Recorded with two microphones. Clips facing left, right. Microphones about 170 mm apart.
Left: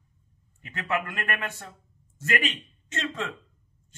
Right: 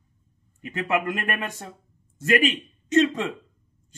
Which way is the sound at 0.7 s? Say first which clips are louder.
Right 5 dB; 15° right (ahead or behind).